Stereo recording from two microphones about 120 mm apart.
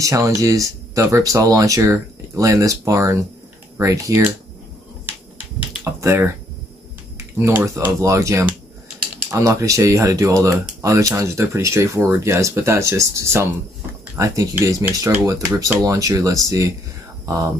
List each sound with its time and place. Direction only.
0.0 s speech: 25° right (ahead or behind)
5.9 s speech: 20° right (ahead or behind)